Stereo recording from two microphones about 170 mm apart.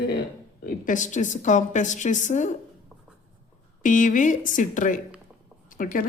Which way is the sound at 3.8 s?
50° left (ahead or behind).